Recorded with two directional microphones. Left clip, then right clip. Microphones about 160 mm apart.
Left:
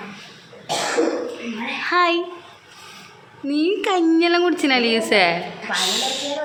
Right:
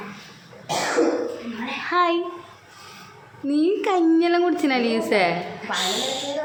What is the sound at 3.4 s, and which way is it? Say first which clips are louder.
A woman's voice: left 1 dB; 15° right (ahead or behind).